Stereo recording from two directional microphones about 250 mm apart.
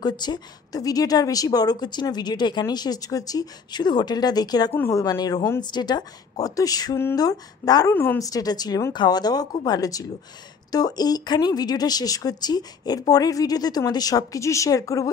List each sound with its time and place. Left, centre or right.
0.0 s a woman's voice: centre